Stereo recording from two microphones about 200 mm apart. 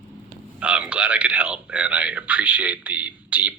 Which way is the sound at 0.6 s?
5° right (ahead or behind).